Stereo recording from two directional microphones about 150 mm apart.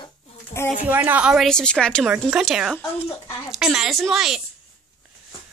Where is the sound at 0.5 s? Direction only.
45° left (ahead or behind).